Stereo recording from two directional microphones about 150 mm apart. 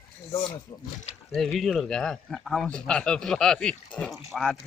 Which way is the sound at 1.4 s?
Centre (ahead or behind).